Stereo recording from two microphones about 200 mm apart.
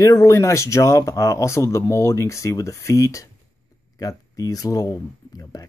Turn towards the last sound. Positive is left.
turn(degrees=20)  # may be behind; listen again after turning